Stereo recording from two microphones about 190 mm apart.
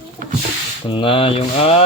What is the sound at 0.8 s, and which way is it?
Speech, 25° left (ahead or behind).